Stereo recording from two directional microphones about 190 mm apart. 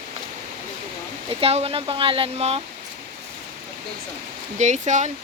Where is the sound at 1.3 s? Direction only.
30° right (ahead or behind).